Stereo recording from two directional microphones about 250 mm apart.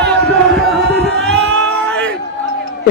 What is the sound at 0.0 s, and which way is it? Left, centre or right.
Chant, centre.